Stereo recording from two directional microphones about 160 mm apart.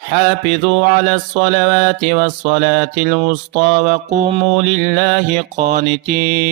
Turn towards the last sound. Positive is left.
turn(degrees=-55)  # may be behind; listen again after turning